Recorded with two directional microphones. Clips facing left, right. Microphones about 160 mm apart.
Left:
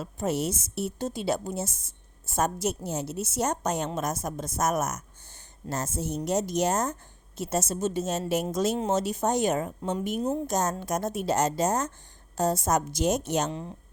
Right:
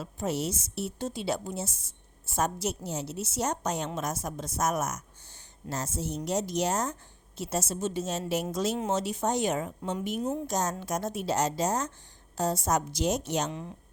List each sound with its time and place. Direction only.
0.0 s a woman's voice: 50° left (ahead or behind)
13.5 s a woman's voice: 35° left (ahead or behind)